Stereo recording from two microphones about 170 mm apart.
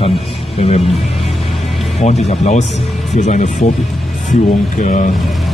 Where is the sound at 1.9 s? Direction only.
40° left (ahead or behind).